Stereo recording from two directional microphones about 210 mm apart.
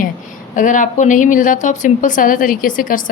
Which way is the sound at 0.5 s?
40° left (ahead or behind).